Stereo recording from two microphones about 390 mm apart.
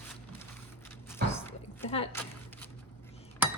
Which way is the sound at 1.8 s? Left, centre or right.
Centre.